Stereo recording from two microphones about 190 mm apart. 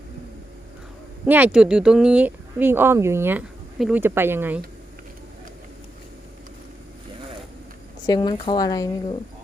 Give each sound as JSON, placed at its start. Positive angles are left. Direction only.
{"t": 1.2, "sound": "speech", "side_deg": -10}
{"t": 8.0, "sound": "speech", "side_deg": 20}